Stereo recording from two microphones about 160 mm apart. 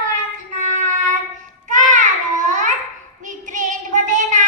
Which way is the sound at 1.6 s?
50° right (ahead or behind).